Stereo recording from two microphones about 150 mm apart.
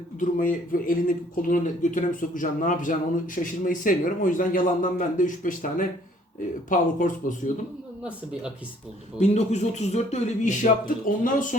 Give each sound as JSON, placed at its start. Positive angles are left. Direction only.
{"t": 0.2, "sound": "speech", "side_deg": 65}
{"t": 8.0, "sound": "speech", "side_deg": -5}
{"t": 9.1, "sound": "speech", "side_deg": 50}